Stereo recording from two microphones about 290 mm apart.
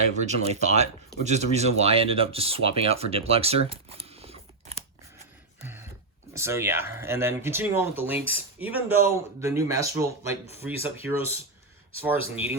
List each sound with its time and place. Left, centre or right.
0.1 s speech: right
5.6 s dog: centre
6.3 s speech: centre